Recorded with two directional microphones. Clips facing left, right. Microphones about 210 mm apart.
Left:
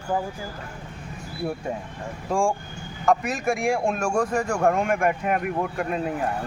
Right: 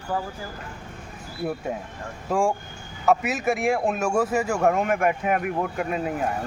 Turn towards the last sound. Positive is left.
turn(degrees=0)  # may be behind; listen again after turning